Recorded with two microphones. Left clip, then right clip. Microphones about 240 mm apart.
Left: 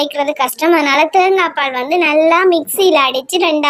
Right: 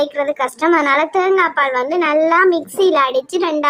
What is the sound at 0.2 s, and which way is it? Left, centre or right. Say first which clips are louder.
Speech: left 3 dB; left.